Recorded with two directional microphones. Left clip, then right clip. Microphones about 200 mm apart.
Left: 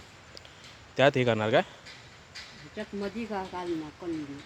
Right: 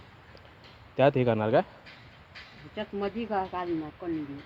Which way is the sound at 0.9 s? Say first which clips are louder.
Even; centre (ahead or behind).